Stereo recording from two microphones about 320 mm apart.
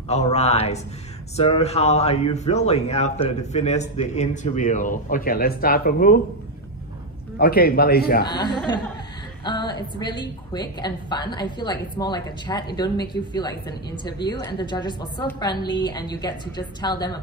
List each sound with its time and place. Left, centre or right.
0.1 s speech: centre
7.3 s speech: left
9.4 s a woman's voice: centre